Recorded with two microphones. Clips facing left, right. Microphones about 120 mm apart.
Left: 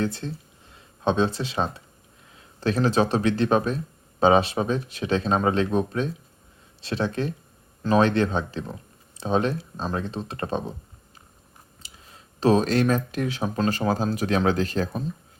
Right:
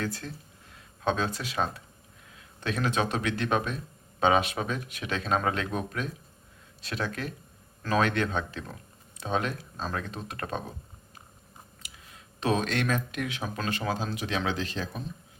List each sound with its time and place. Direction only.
0.0 s speech: 25° left (ahead or behind)
11.8 s speech: 30° left (ahead or behind)